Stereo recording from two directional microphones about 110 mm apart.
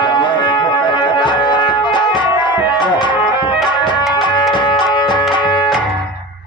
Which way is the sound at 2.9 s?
45° left (ahead or behind).